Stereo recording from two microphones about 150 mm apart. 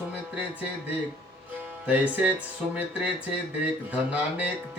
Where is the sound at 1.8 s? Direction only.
10° right (ahead or behind).